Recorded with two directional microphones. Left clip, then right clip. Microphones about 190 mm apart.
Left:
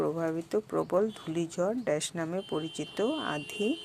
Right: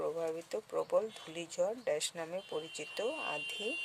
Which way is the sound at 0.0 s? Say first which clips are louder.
Left 6 dB; 10° left (ahead or behind).